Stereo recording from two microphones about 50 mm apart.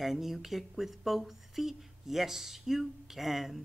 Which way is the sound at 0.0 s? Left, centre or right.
Centre.